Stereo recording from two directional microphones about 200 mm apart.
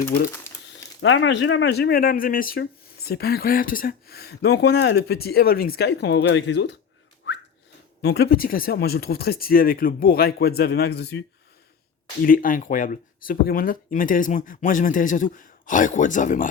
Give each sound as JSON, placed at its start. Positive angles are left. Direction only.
{"t": 1.0, "sound": "speech", "side_deg": 70}
{"t": 7.3, "sound": "whistling", "side_deg": 65}
{"t": 8.0, "sound": "speech", "side_deg": 55}
{"t": 12.2, "sound": "speech", "side_deg": 45}